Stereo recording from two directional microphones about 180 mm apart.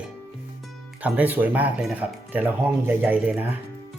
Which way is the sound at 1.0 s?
10° right (ahead or behind).